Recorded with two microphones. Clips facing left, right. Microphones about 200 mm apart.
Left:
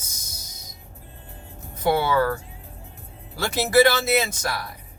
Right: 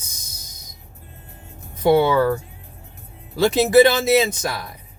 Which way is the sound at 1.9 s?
20° right (ahead or behind).